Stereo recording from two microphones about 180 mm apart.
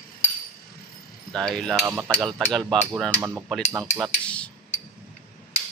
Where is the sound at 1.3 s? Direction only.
5° left (ahead or behind).